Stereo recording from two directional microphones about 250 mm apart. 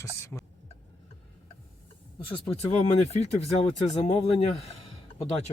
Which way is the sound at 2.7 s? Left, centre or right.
Left.